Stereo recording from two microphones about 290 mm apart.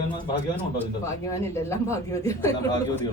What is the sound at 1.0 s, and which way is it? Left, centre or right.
Speech, centre.